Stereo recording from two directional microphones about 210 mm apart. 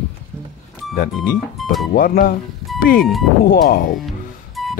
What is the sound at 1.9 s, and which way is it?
Speech, 45° left (ahead or behind).